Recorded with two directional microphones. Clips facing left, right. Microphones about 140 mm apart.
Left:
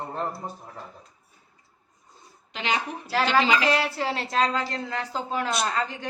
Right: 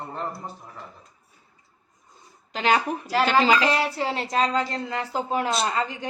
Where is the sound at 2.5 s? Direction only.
45° right (ahead or behind).